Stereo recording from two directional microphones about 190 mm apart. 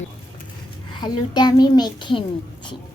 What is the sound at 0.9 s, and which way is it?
A child's voice, 25° left (ahead or behind).